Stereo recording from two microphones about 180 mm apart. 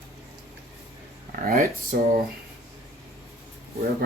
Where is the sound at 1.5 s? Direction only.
50° right (ahead or behind).